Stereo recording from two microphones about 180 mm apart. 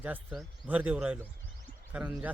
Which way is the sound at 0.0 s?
5° right (ahead or behind).